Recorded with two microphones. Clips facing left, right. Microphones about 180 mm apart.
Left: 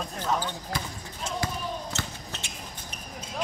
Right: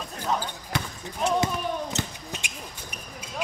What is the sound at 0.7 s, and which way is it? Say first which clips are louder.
Speech: right 3 dB; 70° right (ahead or behind).